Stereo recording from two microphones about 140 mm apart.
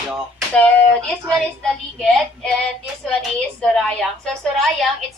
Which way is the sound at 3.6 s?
5° left (ahead or behind).